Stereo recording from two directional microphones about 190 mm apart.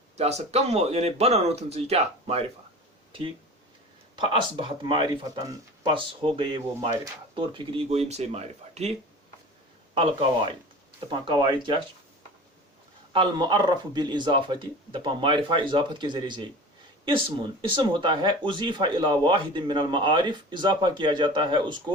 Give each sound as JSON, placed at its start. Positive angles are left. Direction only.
{"t": 0.2, "sound": "speech", "side_deg": -35}
{"t": 4.1, "sound": "speech", "side_deg": -25}
{"t": 13.1, "sound": "speech", "side_deg": -20}